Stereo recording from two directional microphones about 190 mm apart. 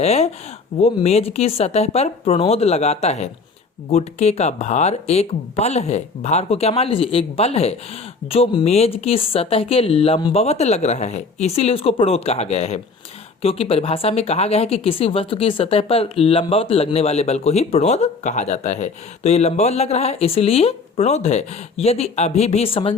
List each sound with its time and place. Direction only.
0.0 s speech: 35° left (ahead or behind)